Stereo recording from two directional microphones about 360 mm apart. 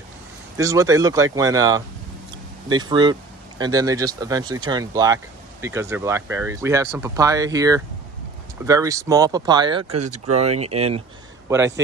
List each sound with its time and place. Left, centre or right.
0.6 s speech: centre